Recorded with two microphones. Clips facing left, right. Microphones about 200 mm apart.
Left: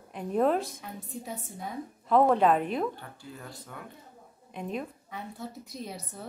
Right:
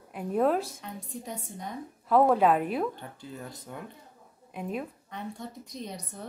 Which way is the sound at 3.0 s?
20° right (ahead or behind).